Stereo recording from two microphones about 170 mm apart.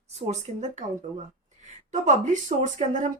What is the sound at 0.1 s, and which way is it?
Speech, 40° right (ahead or behind).